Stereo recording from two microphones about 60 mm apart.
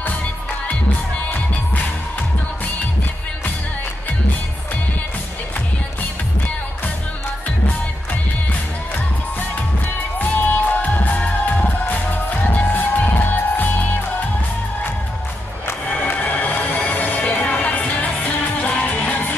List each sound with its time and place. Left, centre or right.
10.1 s music: left
15.9 s music: left